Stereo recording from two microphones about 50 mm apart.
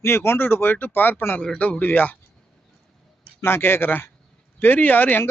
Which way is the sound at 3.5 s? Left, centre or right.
Left.